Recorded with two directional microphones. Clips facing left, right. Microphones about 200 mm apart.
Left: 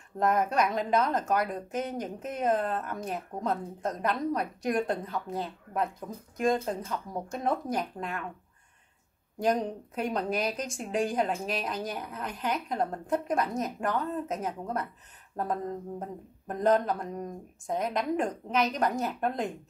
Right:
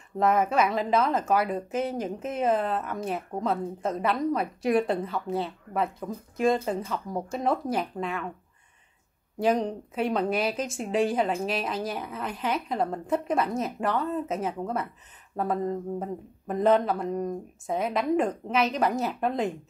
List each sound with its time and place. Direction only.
0.2 s speech: 5° right (ahead or behind)
9.4 s speech: 5° right (ahead or behind)
16.0 s speech: 5° right (ahead or behind)